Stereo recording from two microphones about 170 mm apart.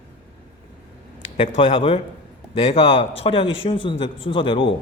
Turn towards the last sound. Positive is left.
turn(degrees=30)  # may be behind; listen again after turning